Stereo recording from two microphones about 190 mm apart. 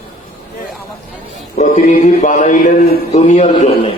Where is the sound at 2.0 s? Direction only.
45° left (ahead or behind).